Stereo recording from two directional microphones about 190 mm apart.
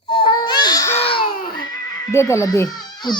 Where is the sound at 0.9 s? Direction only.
30° left (ahead or behind).